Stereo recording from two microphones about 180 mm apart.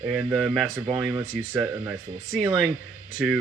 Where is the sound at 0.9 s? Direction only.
20° right (ahead or behind).